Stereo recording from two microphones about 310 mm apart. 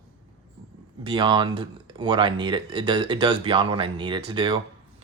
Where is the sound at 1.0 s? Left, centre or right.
Centre.